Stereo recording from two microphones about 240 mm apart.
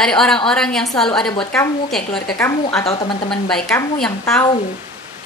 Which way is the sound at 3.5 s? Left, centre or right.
Centre.